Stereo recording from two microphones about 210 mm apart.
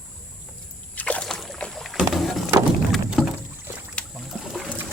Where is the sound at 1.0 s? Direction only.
5° left (ahead or behind).